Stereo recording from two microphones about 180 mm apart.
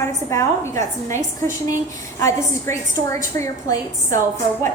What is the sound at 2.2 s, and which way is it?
A woman's voice, 15° left (ahead or behind).